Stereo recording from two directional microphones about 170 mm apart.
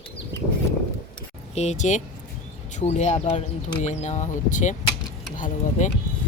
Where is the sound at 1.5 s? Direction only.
40° left (ahead or behind).